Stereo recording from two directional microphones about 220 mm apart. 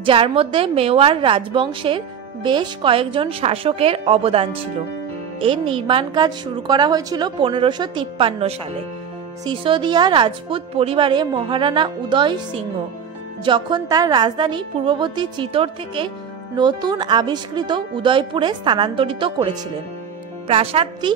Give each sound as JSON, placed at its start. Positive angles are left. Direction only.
{"t": 0.0, "sound": "a woman's voice", "side_deg": -25}